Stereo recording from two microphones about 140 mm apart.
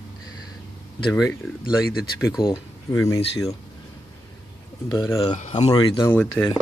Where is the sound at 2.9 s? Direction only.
20° left (ahead or behind).